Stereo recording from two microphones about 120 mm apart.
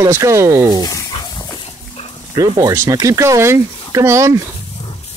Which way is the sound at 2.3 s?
30° right (ahead or behind).